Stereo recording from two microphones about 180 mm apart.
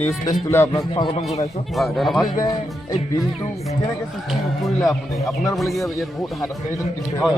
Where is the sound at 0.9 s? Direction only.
30° left (ahead or behind).